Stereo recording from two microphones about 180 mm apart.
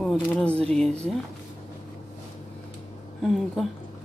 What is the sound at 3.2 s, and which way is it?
Speech, centre (ahead or behind).